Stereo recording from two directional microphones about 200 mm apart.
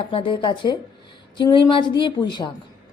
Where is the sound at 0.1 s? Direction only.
25° left (ahead or behind).